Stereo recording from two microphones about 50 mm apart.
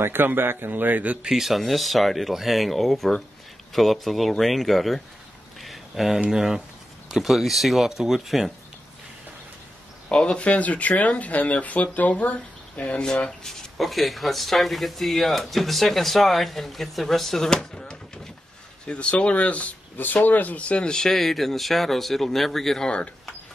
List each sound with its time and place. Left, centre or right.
0.0 s speech: right
1.2 s speech: centre
5.6 s a sound: centre
6.3 s speech: centre
10.0 s speech: centre
13.0 s speech: centre
13.7 s speech: centre